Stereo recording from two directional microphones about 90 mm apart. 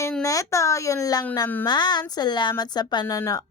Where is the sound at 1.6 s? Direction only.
55° left (ahead or behind).